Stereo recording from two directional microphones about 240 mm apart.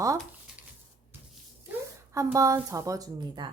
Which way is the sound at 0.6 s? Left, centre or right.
Centre.